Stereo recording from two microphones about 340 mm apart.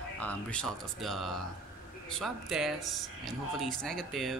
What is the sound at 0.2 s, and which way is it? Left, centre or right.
Speech, centre.